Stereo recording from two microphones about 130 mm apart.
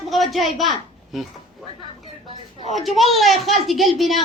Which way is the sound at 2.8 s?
Centre (ahead or behind).